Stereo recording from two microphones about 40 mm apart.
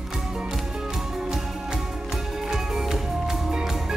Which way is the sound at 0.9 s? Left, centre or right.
Centre.